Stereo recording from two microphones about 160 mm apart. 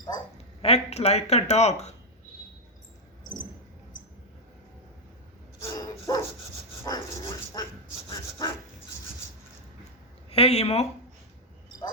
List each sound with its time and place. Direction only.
0.6 s speech: 40° left (ahead or behind)
5.6 s dog: 20° left (ahead or behind)
6.8 s vehicle: 25° left (ahead or behind)
8.1 s dog: 25° left (ahead or behind)
10.2 s speech: 40° left (ahead or behind)